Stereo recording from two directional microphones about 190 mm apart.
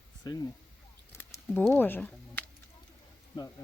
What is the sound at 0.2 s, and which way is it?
Speech, 20° left (ahead or behind).